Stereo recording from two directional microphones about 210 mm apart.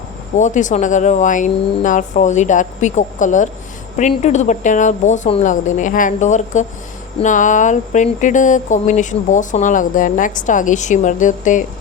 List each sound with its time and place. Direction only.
0.3 s speech: 35° left (ahead or behind)